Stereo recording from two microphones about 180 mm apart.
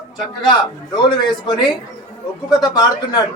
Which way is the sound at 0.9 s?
25° left (ahead or behind).